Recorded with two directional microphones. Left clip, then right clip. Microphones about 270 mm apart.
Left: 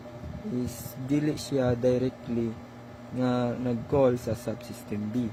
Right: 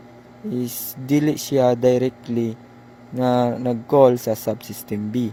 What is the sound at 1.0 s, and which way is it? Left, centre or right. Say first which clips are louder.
Speech: right 8 dB; right.